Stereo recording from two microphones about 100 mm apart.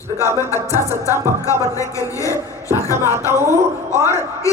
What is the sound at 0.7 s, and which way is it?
Speech, 25° right (ahead or behind).